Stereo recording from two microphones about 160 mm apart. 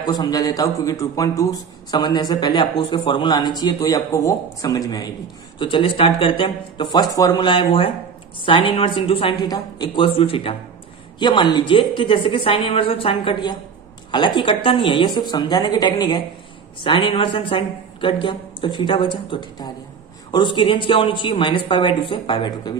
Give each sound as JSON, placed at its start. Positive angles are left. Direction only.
{"t": 0.0, "sound": "a woman's voice", "side_deg": 25}